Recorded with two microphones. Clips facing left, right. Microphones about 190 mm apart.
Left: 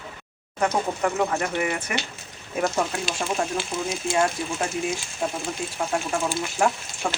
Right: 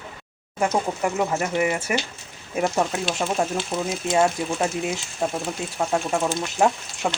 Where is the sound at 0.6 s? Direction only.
5° right (ahead or behind).